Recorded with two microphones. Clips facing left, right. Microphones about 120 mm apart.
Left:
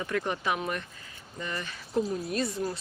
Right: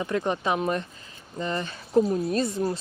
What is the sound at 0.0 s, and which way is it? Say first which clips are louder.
Speech: right 4 dB; 25° right (ahead or behind).